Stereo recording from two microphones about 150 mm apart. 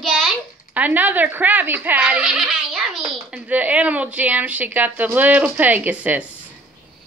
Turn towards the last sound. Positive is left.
turn(degrees=-10)  # may be behind; listen again after turning